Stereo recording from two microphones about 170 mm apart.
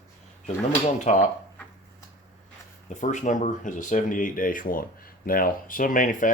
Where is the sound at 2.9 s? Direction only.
45° left (ahead or behind).